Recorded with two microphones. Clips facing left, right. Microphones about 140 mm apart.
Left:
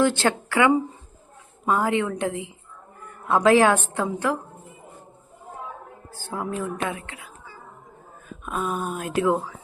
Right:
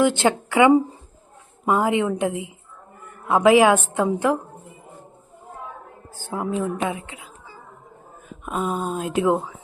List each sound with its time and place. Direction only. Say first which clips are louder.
0.0 s a woman's voice: right 2 dB; 15° right (ahead or behind)
3.4 s a woman's voice: right 3 dB; 10° right (ahead or behind)
6.1 s a woman's voice: right 4 dB; 15° right (ahead or behind)
8.3 s speech: right 2 dB; 20° right (ahead or behind)